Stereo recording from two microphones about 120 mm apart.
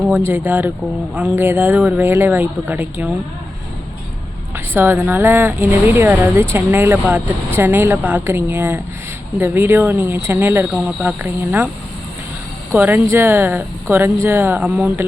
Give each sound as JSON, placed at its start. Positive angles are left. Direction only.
{"t": 0.1, "sound": "speech", "side_deg": -20}
{"t": 4.5, "sound": "speech", "side_deg": -20}
{"t": 12.7, "sound": "speech", "side_deg": -15}